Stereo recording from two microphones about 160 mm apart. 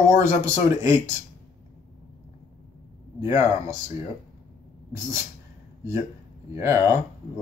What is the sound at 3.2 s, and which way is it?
Speech, 20° right (ahead or behind).